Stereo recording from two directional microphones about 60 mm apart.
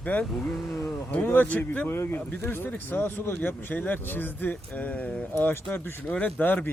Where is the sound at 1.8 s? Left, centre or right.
Left.